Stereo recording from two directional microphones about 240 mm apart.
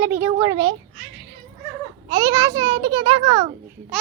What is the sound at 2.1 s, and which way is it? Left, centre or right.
A child's voice, centre.